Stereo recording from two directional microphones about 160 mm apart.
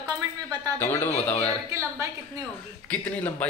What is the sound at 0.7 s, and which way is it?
Speech, 15° left (ahead or behind).